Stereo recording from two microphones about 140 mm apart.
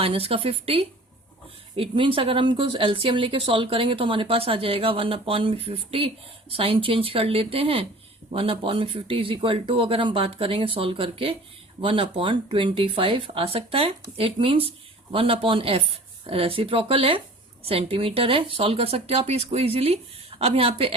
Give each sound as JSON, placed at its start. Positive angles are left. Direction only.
{"t": 0.0, "sound": "a woman's voice", "side_deg": -40}